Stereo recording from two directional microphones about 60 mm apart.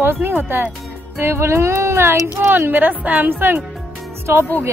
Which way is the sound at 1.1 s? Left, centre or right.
Right.